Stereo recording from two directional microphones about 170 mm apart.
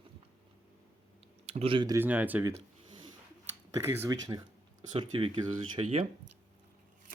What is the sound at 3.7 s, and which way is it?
Speech, 15° right (ahead or behind).